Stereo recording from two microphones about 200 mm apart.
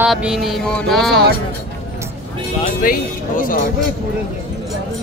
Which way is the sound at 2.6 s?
45° left (ahead or behind).